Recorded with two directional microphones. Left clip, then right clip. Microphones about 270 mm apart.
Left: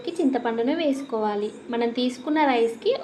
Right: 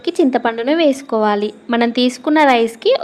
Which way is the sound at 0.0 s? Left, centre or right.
Right.